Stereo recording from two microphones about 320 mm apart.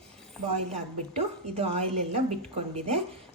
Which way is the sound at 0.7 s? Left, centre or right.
Centre.